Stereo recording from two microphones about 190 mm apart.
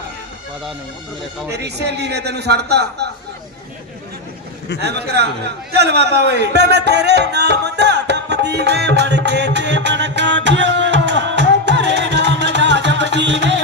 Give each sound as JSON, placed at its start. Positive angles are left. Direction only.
{"t": 1.5, "sound": "a man's voice", "side_deg": -60}
{"t": 4.8, "sound": "a man's voice", "side_deg": -60}
{"t": 5.7, "sound": "music", "side_deg": -60}